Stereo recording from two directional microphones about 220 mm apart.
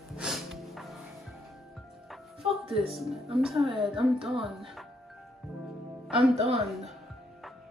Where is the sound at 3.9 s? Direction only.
25° right (ahead or behind).